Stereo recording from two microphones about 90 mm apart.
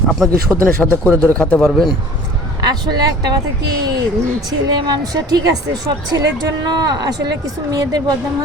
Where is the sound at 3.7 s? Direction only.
50° right (ahead or behind).